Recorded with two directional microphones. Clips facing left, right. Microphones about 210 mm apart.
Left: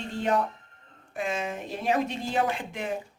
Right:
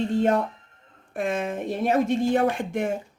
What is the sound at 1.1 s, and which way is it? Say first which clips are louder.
A woman's voice: right 4 dB; 55° right (ahead or behind).